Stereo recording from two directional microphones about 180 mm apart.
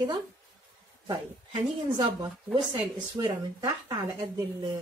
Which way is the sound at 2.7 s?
30° right (ahead or behind).